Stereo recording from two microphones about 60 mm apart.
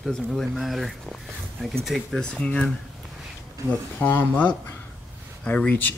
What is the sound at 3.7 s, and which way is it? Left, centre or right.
Speech, left.